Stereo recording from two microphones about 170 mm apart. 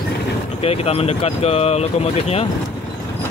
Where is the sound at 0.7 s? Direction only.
35° left (ahead or behind).